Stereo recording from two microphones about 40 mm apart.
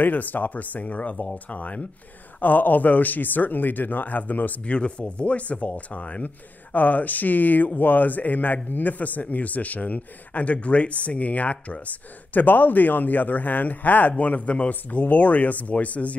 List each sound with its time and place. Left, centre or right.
0.0 s speech: left
2.4 s speech: left
4.6 s speech: left
12.4 s speech: left
14.7 s speech: left